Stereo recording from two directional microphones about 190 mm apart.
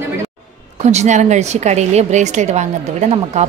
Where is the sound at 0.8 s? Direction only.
35° right (ahead or behind).